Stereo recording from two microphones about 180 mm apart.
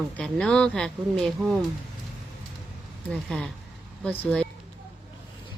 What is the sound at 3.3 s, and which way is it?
Speech, 5° left (ahead or behind).